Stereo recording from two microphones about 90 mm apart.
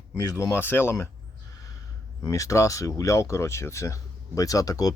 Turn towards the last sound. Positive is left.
turn(degrees=45)  # may be behind; listen again after turning